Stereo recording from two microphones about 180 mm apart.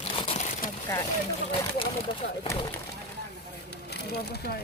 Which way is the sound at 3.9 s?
65° left (ahead or behind).